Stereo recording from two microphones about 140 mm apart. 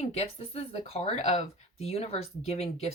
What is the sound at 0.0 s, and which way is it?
Speech, 50° left (ahead or behind).